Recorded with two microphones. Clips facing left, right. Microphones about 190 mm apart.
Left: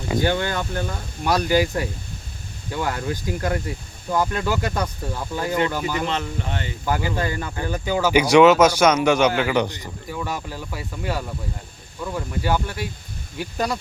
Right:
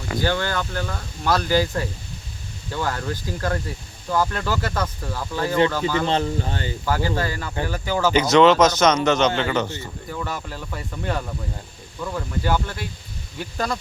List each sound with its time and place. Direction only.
0.1 s speech: 20° left (ahead or behind)
6.1 s speech: 35° right (ahead or behind)
7.2 s speech: 20° left (ahead or behind)